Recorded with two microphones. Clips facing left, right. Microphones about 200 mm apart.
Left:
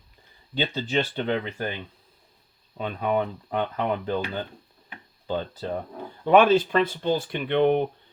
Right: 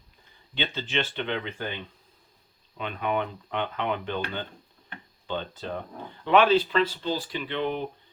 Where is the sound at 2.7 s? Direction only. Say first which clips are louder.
Left 3 dB; 40° left (ahead or behind).